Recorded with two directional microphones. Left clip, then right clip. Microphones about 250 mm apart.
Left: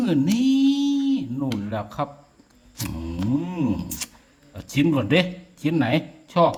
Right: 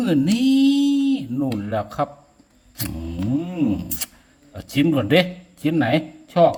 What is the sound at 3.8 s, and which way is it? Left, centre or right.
Speech, centre.